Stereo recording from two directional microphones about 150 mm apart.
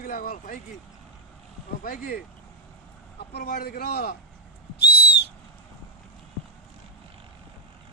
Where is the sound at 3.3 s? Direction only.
90° left.